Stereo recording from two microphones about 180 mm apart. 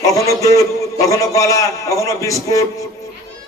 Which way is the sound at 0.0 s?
15° left (ahead or behind).